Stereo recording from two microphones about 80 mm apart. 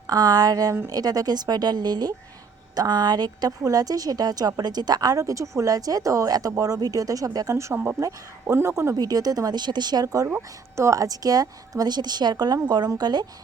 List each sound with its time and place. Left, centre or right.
0.1 s a woman's voice: right
7.5 s speech: right
9.0 s a woman's voice: right